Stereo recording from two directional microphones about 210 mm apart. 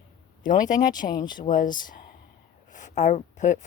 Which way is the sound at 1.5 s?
40° left (ahead or behind).